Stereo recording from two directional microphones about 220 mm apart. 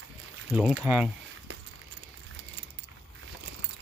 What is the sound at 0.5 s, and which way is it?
Speech, 5° right (ahead or behind).